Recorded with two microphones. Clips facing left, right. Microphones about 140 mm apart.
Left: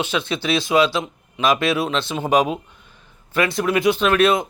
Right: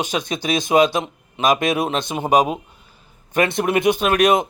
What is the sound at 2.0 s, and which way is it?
Speech, 15° right (ahead or behind).